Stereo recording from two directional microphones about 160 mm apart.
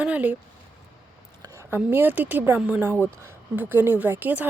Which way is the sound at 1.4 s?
15° right (ahead or behind).